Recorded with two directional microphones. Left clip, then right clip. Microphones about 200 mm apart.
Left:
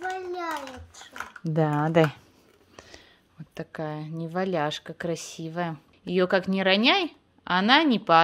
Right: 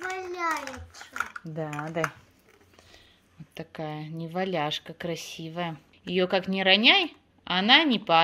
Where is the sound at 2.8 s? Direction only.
45° left (ahead or behind).